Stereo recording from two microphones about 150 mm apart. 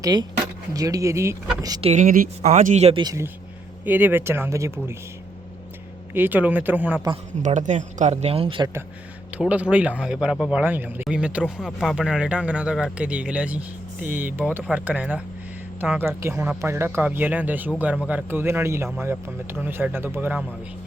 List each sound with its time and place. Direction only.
0.0 s speech: 25° right (ahead or behind)
1.8 s speech: 45° right (ahead or behind)
2.0 s speech: 70° right (ahead or behind)
2.4 s speech: 55° right (ahead or behind)
3.0 s a man's voice: 25° right (ahead or behind)
3.8 s speech: 10° right (ahead or behind)
6.1 s speech: 10° right (ahead or behind)
7.4 s speech: 55° right (ahead or behind); by 8.6 s 40° right (ahead or behind)
9.4 s speech: 10° right (ahead or behind)